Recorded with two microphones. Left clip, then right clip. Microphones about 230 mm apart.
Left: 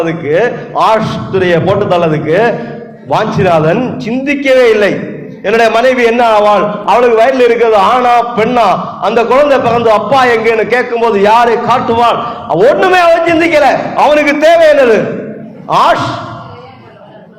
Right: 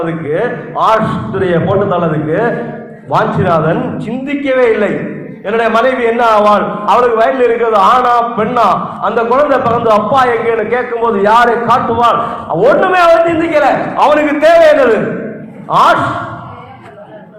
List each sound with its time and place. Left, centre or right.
0.0 s a man's voice: left